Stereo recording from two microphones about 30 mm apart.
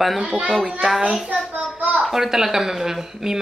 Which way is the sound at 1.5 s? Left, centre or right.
Right.